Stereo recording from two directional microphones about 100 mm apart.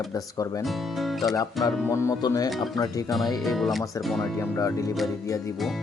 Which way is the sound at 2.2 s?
40° left (ahead or behind).